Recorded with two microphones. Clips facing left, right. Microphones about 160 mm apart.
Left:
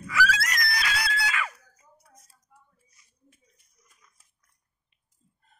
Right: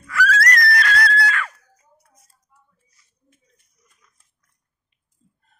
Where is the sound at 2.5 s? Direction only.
50° left (ahead or behind).